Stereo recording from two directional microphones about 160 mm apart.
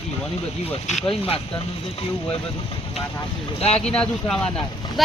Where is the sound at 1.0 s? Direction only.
35° left (ahead or behind).